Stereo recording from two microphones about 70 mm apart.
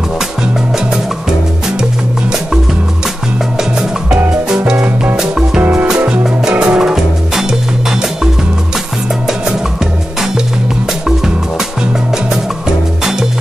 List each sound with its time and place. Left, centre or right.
5.1 s music: centre
5.6 s music: right; by 7.4 s centre
11.1 s music: centre